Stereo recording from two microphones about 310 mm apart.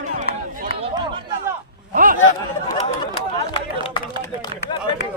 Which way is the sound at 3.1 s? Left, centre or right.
Centre.